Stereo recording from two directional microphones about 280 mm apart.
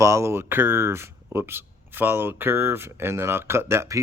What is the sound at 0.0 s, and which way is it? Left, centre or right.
Speech, centre.